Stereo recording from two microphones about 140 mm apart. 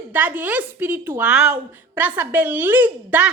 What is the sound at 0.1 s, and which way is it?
A woman's voice, 10° right (ahead or behind).